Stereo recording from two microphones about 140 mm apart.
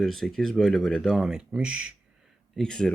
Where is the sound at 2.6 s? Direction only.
5° left (ahead or behind).